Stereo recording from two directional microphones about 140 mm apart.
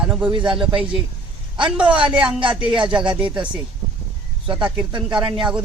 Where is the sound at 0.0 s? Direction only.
5° right (ahead or behind).